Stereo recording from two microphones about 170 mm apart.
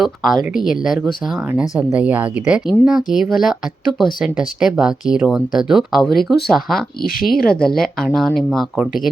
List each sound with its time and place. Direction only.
0.0 s a woman's voice: centre (ahead or behind)
7.0 s speech: 60° left (ahead or behind)
7.4 s speech: 5° left (ahead or behind)